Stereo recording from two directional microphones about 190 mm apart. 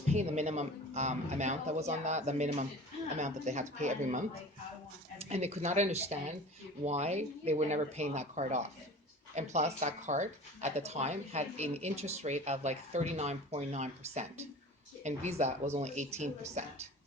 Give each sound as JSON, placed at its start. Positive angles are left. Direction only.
{"t": 0.1, "sound": "speech", "side_deg": -35}